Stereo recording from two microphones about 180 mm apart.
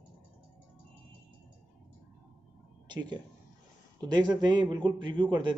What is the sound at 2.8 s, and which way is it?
Speech, 25° right (ahead or behind).